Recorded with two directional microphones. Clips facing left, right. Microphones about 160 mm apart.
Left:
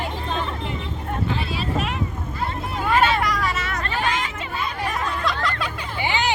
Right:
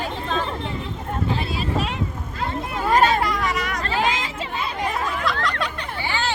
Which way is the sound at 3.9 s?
90° right.